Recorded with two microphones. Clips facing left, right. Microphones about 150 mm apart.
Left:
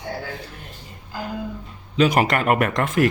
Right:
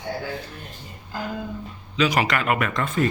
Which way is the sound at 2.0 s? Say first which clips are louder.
Left 4 dB; 50° left (ahead or behind).